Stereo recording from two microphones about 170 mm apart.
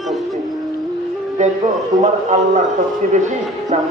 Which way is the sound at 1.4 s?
45° right (ahead or behind).